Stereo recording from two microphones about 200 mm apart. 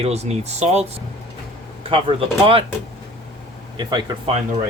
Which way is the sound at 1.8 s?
25° right (ahead or behind).